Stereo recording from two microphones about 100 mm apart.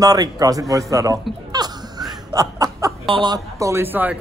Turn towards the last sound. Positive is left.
turn(degrees=-20)  # may be behind; listen again after turning